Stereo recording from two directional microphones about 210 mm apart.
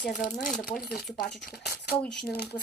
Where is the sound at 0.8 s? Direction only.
45° left (ahead or behind).